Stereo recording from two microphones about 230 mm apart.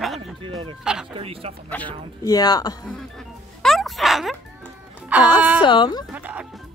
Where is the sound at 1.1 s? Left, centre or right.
Right.